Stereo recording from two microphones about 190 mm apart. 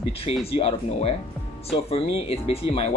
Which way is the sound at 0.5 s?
30° left (ahead or behind).